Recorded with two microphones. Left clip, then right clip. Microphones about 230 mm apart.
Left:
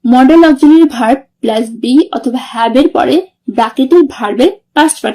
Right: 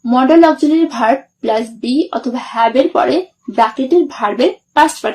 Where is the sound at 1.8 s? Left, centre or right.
Left.